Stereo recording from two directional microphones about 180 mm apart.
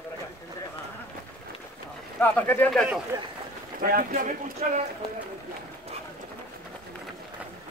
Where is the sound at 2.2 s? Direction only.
10° left (ahead or behind).